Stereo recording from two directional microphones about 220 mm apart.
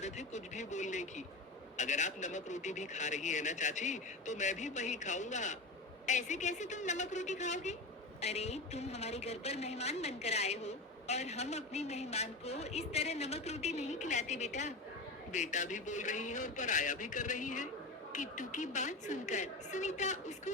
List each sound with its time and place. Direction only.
0.0 s a man's voice: 30° left (ahead or behind)